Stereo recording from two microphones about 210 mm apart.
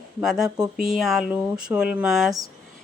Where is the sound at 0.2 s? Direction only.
Centre (ahead or behind).